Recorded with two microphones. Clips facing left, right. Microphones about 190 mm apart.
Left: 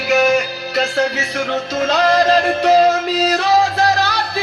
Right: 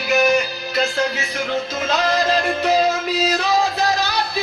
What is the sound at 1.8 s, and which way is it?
Music, 70° left (ahead or behind).